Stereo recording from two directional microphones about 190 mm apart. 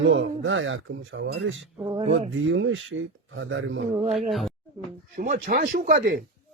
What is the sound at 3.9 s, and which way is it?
Speech, 30° right (ahead or behind).